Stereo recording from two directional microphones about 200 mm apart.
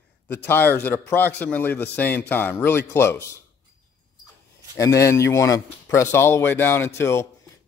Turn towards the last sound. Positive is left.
turn(degrees=15)  # may be behind; listen again after turning